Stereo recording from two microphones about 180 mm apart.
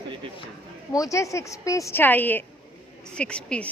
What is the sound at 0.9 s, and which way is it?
A woman's voice, 20° left (ahead or behind).